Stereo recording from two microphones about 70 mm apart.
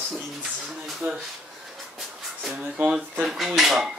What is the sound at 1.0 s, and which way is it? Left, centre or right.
Speech, right.